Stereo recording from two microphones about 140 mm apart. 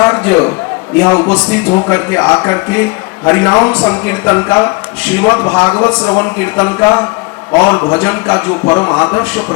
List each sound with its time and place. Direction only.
0.0 s a man's voice: 15° left (ahead or behind)